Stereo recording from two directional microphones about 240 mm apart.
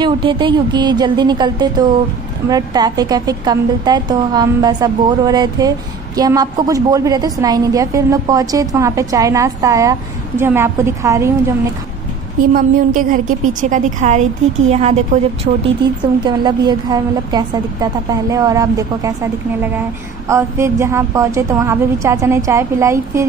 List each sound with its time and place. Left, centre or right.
0.0 s a woman's voice: centre
12.5 s a woman's voice: right; by 19.1 s centre
20.2 s a woman's voice: centre